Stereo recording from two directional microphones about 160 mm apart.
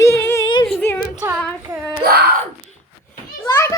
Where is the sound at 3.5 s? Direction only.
15° left (ahead or behind).